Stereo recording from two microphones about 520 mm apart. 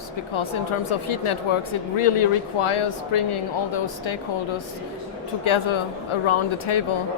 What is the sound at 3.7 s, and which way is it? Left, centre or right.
Speech, left.